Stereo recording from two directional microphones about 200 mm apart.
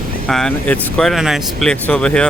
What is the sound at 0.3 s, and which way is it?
Speech, 5° left (ahead or behind).